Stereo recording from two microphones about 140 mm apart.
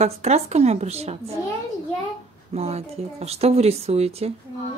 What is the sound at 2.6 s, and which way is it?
Speech, 50° right (ahead or behind).